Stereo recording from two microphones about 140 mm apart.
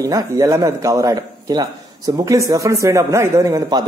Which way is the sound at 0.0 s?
25° right (ahead or behind).